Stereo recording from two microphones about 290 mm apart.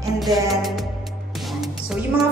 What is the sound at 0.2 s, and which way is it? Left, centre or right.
Music, centre.